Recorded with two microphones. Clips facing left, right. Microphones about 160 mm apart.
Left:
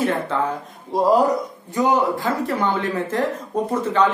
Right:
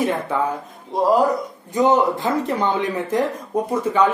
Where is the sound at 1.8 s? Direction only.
20° right (ahead or behind).